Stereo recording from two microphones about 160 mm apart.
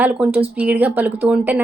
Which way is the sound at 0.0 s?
10° right (ahead or behind).